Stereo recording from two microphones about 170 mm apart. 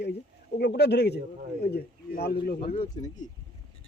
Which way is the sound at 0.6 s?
75° left (ahead or behind).